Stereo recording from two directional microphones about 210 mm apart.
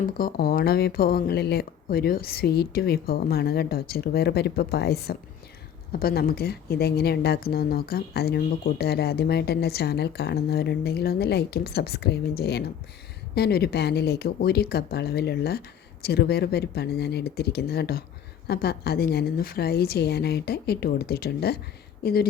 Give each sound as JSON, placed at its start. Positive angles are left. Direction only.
{"t": 0.2, "sound": "speech", "side_deg": 45}